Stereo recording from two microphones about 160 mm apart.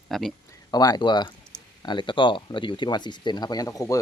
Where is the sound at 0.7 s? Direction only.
25° left (ahead or behind).